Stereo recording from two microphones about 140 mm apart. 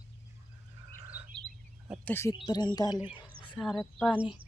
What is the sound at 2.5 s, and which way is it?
Speech, 30° left (ahead or behind).